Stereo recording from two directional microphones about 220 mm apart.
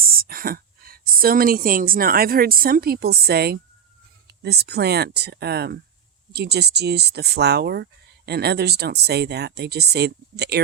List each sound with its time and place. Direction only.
0.0 s speech: 40° right (ahead or behind)